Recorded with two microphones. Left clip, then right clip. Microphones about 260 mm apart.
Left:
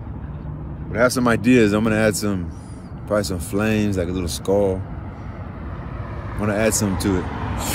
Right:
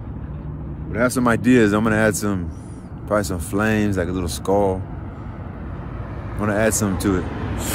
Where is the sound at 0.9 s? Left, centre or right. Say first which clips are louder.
Left 1 dB; centre.